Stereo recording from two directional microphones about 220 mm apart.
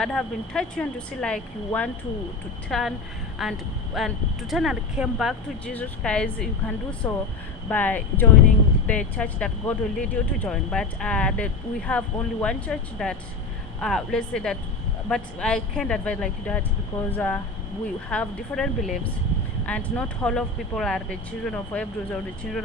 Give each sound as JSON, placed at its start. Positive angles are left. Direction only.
{"t": 0.0, "sound": "speech", "side_deg": 0}